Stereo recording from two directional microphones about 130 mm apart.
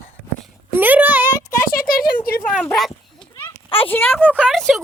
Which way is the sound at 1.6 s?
90° left.